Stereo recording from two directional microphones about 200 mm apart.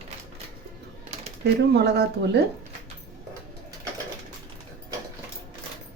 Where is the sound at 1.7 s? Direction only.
55° right (ahead or behind).